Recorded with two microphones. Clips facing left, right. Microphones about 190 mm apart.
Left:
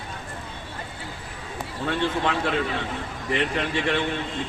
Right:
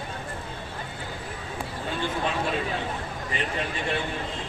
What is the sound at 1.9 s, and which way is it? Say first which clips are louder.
A man's voice: left 4 dB; 80° left.